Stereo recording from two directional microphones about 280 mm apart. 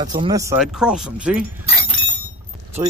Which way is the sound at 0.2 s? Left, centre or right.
Centre.